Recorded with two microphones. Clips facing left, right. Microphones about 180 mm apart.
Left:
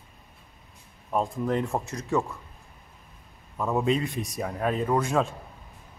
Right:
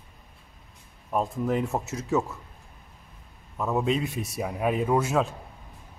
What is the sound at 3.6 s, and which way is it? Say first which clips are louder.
Speech: left 1 dB; centre (ahead or behind).